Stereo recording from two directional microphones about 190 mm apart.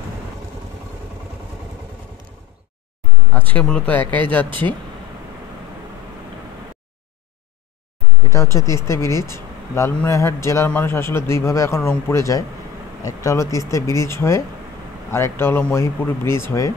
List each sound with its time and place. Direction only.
3.3 s speech: 10° left (ahead or behind)
8.3 s speech: 15° left (ahead or behind)